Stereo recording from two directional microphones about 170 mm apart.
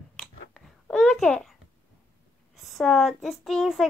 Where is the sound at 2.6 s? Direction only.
Centre (ahead or behind).